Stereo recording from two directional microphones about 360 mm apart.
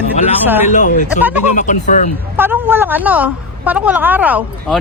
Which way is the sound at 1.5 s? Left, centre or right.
Centre.